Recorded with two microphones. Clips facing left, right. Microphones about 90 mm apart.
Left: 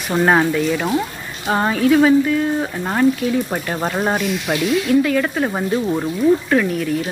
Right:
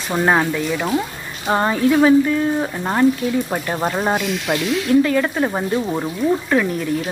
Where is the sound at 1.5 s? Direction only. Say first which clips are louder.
Even; 20° right (ahead or behind).